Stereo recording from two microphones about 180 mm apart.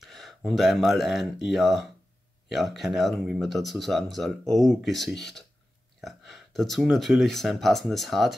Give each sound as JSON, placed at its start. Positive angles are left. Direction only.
{"t": 0.0, "sound": "speech", "side_deg": 0}